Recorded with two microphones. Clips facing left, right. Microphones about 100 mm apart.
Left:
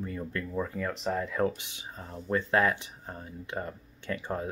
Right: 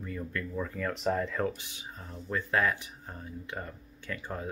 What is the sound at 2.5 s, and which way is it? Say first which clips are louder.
Speech: left 2 dB; 25° left (ahead or behind).